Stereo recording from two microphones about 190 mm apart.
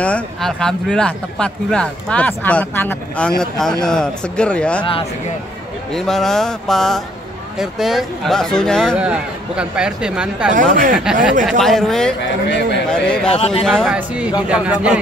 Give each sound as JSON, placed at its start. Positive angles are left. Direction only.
{"t": 0.0, "sound": "speech", "side_deg": 5}
{"t": 5.9, "sound": "speech", "side_deg": 0}
{"t": 10.5, "sound": "speech", "side_deg": -45}
{"t": 11.4, "sound": "speech", "side_deg": 0}
{"t": 12.4, "sound": "a man's voice", "side_deg": 65}
{"t": 12.9, "sound": "speech", "side_deg": 5}